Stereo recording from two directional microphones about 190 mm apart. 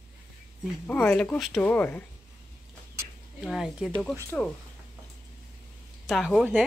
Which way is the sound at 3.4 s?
Centre (ahead or behind).